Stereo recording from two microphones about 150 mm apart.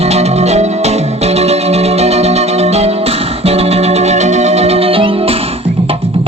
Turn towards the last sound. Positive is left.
turn(degrees=-40)  # may be behind; listen again after turning